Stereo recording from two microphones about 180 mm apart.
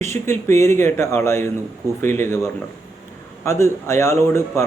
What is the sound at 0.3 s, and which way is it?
A man's voice, 15° left (ahead or behind).